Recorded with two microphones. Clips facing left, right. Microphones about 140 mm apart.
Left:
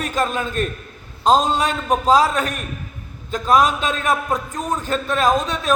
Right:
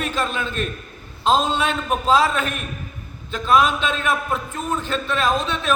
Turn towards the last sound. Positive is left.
turn(degrees=40)  # may be behind; listen again after turning